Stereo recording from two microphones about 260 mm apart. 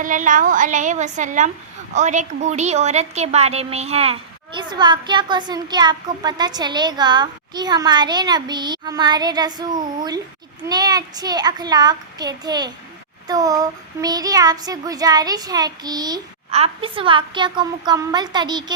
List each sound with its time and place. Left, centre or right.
0.0 s a woman's voice: right